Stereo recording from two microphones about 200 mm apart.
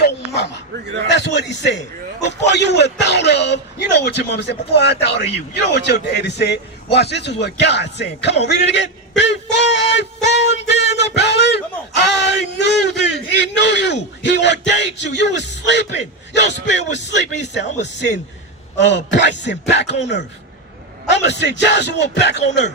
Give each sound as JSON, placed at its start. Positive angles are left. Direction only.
{"t": 0.0, "sound": "dog", "side_deg": 55}
{"t": 1.1, "sound": "a man's voice", "side_deg": 60}
{"t": 8.4, "sound": "a sound", "side_deg": 60}
{"t": 18.8, "sound": "a man's voice", "side_deg": 60}
{"t": 21.1, "sound": "a man's voice", "side_deg": 60}